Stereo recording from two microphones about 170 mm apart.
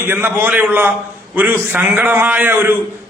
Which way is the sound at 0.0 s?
15° right (ahead or behind).